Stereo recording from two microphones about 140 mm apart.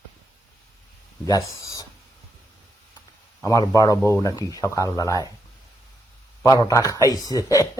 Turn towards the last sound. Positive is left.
turn(degrees=25)  # may be behind; listen again after turning